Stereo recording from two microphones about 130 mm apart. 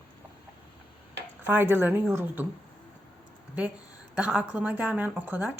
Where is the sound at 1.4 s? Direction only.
15° right (ahead or behind).